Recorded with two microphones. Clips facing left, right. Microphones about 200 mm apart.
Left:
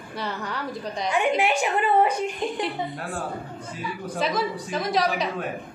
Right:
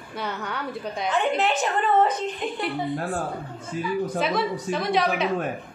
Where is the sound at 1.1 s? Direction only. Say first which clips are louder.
Left 1 dB; 10° left (ahead or behind).